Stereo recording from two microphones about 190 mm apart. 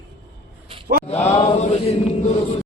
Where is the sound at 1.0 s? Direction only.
35° left (ahead or behind).